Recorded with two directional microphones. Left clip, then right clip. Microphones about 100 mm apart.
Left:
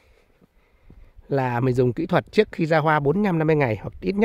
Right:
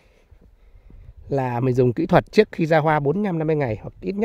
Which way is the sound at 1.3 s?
20° right (ahead or behind).